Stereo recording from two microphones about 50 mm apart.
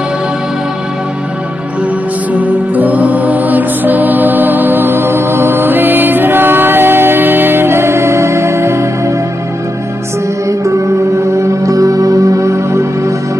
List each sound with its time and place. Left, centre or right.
2.3 s music: right
11.6 s music: right